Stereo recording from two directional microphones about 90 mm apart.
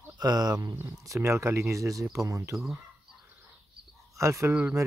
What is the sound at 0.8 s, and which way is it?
Speech, 35° right (ahead or behind).